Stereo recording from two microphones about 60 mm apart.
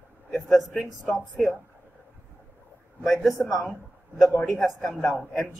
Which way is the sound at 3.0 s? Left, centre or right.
Centre.